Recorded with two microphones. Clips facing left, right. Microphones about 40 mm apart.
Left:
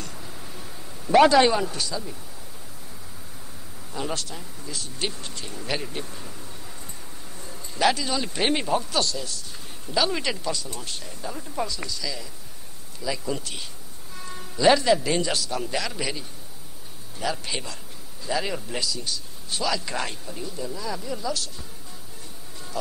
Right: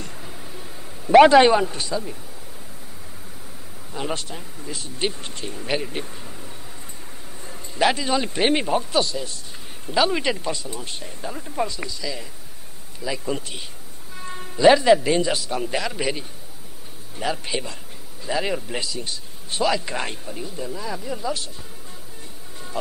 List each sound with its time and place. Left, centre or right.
0.0 s a sound: centre
1.1 s speech: right
3.9 s speech: right
5.6 s speech: centre
7.4 s a sound: right
8.4 s speech: centre
14.1 s music: right
14.6 s speech: centre
15.4 s speech: right
17.2 s a man's voice: right
18.2 s speech: right
18.9 s speech: right